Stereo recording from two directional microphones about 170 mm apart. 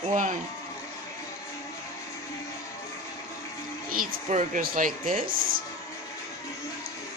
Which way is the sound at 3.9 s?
50° right (ahead or behind).